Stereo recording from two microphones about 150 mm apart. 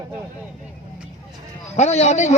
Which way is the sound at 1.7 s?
45° left (ahead or behind).